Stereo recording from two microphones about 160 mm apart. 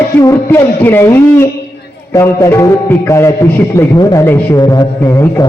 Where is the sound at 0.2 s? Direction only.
20° left (ahead or behind).